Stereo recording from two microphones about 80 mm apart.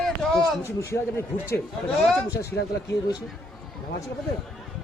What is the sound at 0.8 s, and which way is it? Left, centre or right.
Speech, left.